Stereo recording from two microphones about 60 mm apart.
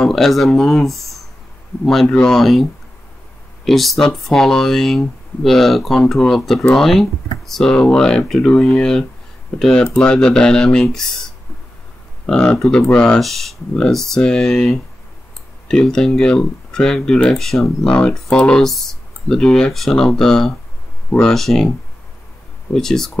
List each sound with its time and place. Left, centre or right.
0.0 s speech: centre
2.0 s speech: centre
2.3 s speech: centre
3.6 s speech: centre
12.3 s speech: centre
13.2 s speech: centre
22.7 s speech: centre